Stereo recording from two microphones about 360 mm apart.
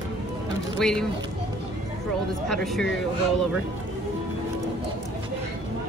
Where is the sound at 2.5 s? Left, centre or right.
Centre.